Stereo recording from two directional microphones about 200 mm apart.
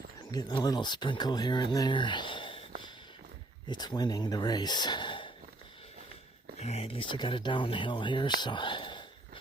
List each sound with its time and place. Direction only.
0.3 s speech: 20° left (ahead or behind)
3.7 s speech: 20° left (ahead or behind)
6.6 s speech: 30° left (ahead or behind)